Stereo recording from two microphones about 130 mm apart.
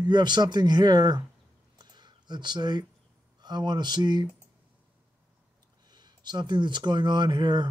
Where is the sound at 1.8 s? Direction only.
35° right (ahead or behind).